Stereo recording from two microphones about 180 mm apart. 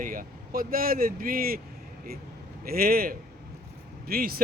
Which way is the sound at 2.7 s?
55° right (ahead or behind).